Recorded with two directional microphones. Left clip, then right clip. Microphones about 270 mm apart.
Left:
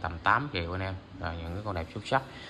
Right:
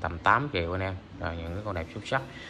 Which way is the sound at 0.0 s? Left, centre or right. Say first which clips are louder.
Right 2 dB; centre.